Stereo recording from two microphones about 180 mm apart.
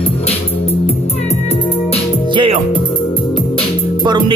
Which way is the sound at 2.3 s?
30° right (ahead or behind).